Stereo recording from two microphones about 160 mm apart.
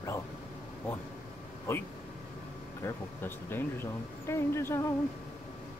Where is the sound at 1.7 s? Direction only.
15° left (ahead or behind).